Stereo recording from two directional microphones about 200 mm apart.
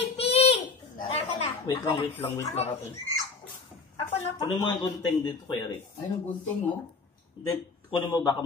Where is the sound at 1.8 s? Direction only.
20° left (ahead or behind).